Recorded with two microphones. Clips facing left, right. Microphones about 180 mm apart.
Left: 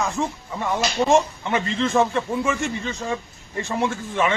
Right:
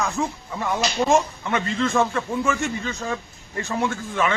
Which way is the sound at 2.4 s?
Centre (ahead or behind).